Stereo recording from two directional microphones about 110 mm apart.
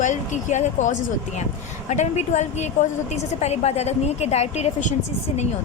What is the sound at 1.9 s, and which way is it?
A woman's voice, 90° left.